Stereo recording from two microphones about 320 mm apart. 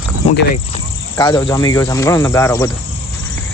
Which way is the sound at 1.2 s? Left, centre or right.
Centre.